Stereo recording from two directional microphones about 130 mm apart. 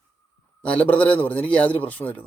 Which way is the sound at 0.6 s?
10° left (ahead or behind).